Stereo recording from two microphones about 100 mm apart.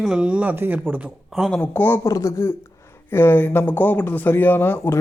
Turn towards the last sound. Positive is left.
turn(degrees=20)  # may be behind; listen again after turning